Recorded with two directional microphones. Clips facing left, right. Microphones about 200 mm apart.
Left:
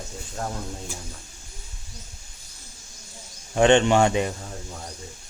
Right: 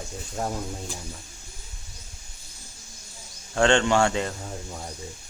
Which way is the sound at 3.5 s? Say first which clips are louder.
Left 3 dB; 20° left (ahead or behind).